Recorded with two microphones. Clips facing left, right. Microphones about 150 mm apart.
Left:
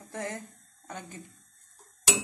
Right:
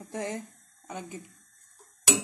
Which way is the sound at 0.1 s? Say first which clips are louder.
Right 2 dB; 20° right (ahead or behind).